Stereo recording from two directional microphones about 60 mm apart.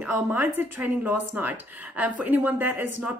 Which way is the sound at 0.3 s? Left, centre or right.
Right.